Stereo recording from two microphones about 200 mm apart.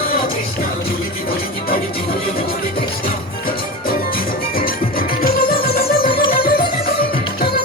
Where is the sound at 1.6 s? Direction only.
45° left (ahead or behind).